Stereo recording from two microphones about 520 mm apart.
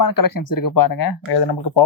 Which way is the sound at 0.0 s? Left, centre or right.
Left.